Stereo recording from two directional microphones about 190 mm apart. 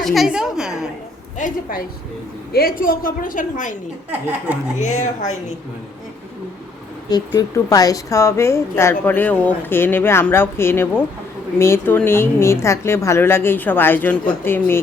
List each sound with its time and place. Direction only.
0.0 s a sound: centre (ahead or behind)
1.4 s a woman's voice: 45° left (ahead or behind)
4.8 s speech: 40° left (ahead or behind)
7.3 s a woman's voice: 20° left (ahead or behind)